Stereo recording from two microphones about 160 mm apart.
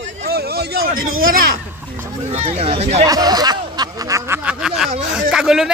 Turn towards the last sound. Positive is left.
turn(degrees=-5)  # may be behind; listen again after turning